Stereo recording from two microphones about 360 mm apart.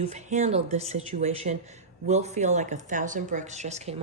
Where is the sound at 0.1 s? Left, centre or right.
Centre.